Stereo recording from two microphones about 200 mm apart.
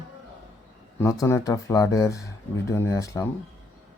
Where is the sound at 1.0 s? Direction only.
15° left (ahead or behind).